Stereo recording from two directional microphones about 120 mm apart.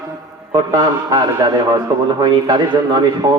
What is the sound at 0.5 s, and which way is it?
Speech, 35° right (ahead or behind).